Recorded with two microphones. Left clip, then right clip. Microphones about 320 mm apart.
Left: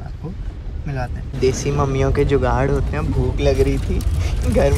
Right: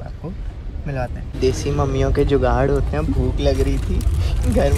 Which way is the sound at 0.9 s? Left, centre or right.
Centre.